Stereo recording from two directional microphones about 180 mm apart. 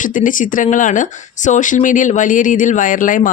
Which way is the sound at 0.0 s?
45° left (ahead or behind).